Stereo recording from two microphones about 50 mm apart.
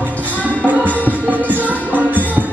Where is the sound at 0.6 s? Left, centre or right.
Right.